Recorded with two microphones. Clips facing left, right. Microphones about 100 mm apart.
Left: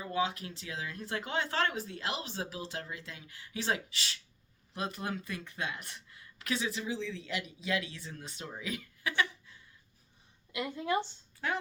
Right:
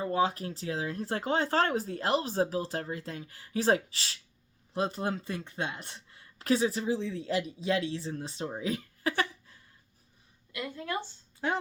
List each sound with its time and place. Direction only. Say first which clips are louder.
0.0 s speech: right 5 dB; 40° right (ahead or behind)
10.5 s a woman's voice: left 3 dB; 20° left (ahead or behind)
11.3 s speech: right 4 dB; 25° right (ahead or behind)